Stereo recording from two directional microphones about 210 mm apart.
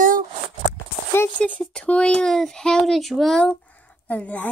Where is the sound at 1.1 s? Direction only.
10° left (ahead or behind).